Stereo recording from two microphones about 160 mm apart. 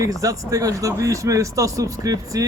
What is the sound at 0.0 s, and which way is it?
Speech, 20° right (ahead or behind).